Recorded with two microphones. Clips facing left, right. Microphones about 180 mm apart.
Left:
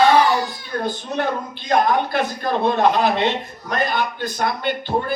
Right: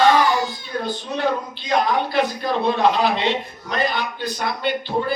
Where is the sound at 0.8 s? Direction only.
50° left (ahead or behind).